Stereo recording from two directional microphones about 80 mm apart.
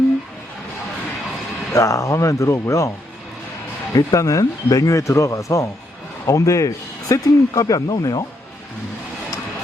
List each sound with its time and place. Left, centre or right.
1.7 s speech: left
3.9 s a man's voice: left